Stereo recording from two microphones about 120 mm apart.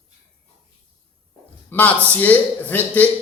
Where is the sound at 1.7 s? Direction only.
20° left (ahead or behind).